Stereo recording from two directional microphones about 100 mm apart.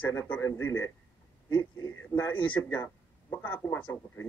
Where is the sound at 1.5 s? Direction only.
45° left (ahead or behind).